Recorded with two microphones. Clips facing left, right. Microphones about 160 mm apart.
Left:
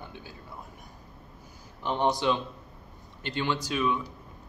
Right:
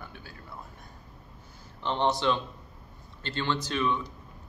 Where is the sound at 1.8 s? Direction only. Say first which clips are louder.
Even; 10° left (ahead or behind).